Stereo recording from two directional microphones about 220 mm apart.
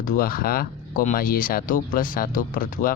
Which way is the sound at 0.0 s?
40° left (ahead or behind).